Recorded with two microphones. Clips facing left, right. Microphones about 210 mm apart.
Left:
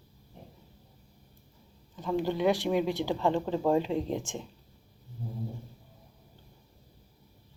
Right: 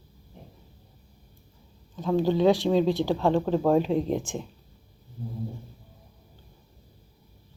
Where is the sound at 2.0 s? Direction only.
90° right.